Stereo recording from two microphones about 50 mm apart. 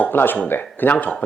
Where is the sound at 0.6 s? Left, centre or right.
Left.